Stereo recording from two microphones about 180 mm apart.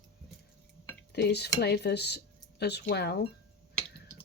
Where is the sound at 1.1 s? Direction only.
65° left (ahead or behind).